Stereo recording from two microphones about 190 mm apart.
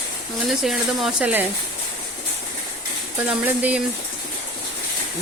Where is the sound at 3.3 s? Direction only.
5° right (ahead or behind).